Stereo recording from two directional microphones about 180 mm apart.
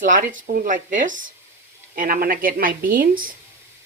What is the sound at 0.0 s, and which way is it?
A woman's voice, 45° right (ahead or behind).